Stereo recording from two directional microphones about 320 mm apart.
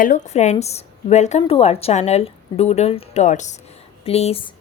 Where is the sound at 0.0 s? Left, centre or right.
Left.